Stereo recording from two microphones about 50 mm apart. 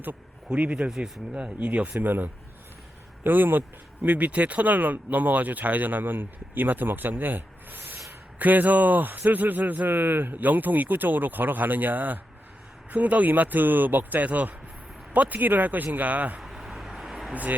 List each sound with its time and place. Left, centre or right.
0.5 s speech: right
0.9 s speech: centre
1.4 s speech: right
2.0 s speech: right
4.0 s speech: right
16.4 s vehicle: centre